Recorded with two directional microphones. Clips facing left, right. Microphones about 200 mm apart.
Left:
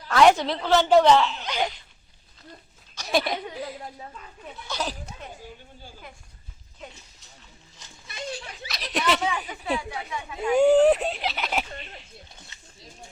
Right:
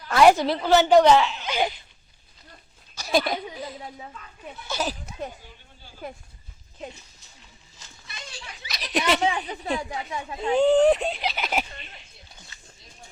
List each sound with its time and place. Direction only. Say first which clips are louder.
0.1 s speech: right 1 dB; 5° right (ahead or behind)
3.0 s a sound: right 1 dB; centre (ahead or behind)
4.7 s speech: right 2 dB; 5° right (ahead or behind)
8.0 s a sound: left 8 dB; 50° left (ahead or behind)
8.6 s speech: right 1 dB; centre (ahead or behind)
9.7 s a woman's voice: even; 35° right (ahead or behind)
10.5 s speech: left 1 dB; 10° left (ahead or behind)
11.7 s speech: left 5 dB; 40° left (ahead or behind)
12.5 s a sound: right 1 dB; 25° left (ahead or behind)